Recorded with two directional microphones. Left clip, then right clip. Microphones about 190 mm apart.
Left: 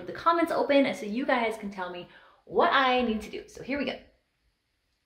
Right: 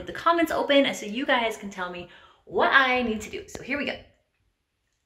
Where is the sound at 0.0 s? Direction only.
Centre (ahead or behind).